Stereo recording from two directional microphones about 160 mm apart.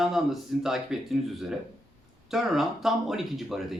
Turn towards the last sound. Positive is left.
turn(degrees=0)  # may be behind; listen again after turning